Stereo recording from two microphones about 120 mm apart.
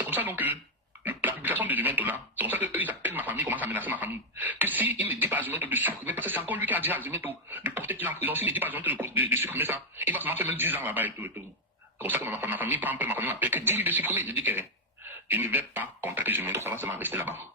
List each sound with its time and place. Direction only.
0.0 s cough: 15° right (ahead or behind)
1.0 s speech: 15° right (ahead or behind)